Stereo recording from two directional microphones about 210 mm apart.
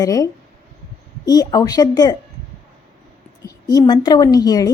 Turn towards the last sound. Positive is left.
turn(degrees=15)  # may be behind; listen again after turning